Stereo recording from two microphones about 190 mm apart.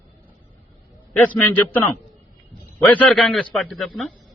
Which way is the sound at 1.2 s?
10° left (ahead or behind).